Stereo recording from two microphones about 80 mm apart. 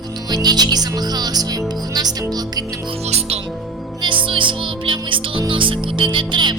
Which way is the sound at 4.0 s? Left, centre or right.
Right.